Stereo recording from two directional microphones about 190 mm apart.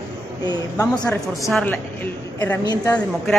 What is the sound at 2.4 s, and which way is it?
Speech, 15° left (ahead or behind).